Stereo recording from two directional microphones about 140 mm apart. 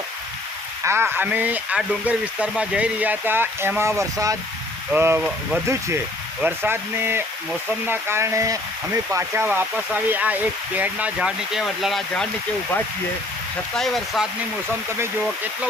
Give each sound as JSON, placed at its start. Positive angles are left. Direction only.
{"t": 0.9, "sound": "speech", "side_deg": -15}
{"t": 13.7, "sound": "speech", "side_deg": 0}